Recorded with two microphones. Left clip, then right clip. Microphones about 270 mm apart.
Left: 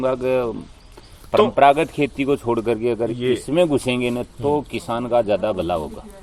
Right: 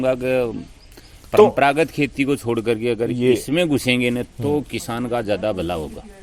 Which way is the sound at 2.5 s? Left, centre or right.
Right.